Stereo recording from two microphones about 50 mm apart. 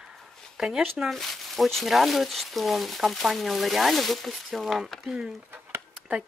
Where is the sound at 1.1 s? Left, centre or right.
Centre.